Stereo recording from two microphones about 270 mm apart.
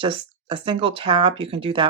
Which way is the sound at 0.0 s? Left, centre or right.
Centre.